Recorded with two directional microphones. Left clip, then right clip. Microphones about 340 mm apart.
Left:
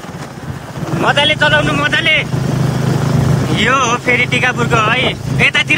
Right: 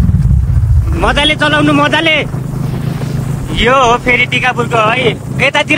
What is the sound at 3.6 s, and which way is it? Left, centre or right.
Speech, centre.